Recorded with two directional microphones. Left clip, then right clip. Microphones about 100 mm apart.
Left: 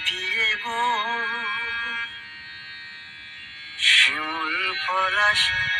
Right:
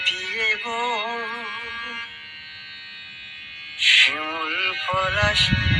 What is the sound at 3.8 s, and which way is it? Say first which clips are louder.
Music: right 1 dB; 40° right (ahead or behind).